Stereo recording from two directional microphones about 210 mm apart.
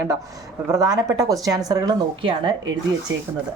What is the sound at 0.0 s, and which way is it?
Speech, 15° right (ahead or behind).